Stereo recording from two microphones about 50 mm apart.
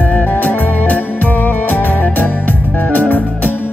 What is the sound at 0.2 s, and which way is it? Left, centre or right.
Music, left.